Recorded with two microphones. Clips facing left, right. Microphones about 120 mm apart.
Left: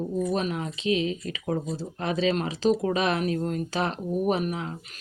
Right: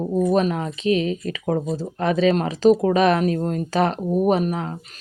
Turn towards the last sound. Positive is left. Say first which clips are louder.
# right 6 dB
turn(degrees=-45)  # may be behind; listen again after turning